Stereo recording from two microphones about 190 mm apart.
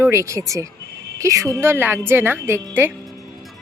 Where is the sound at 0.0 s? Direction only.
15° right (ahead or behind).